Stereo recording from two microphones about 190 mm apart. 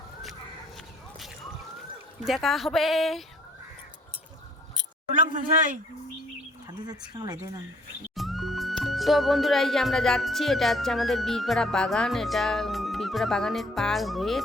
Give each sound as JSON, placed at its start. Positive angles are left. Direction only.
{"t": 2.2, "sound": "speech", "side_deg": 0}
{"t": 7.1, "sound": "speech", "side_deg": -20}
{"t": 8.1, "sound": "speech", "side_deg": 0}